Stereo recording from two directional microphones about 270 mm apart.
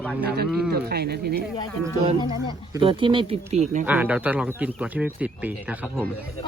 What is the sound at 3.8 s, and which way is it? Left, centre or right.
Speech, centre.